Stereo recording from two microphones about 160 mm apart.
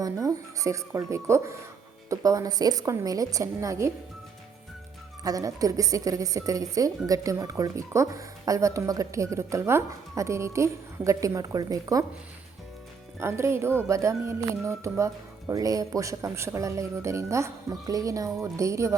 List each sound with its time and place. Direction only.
0.0 s a woman's voice: 20° right (ahead or behind)
5.2 s a woman's voice: 20° right (ahead or behind)
13.1 s a woman's voice: 15° right (ahead or behind)